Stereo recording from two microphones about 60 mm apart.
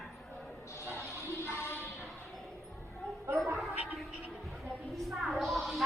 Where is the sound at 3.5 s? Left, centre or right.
Centre.